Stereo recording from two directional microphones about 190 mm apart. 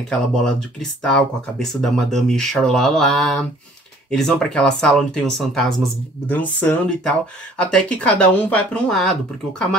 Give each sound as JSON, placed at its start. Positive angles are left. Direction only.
{"t": 0.4, "sound": "speech", "side_deg": 0}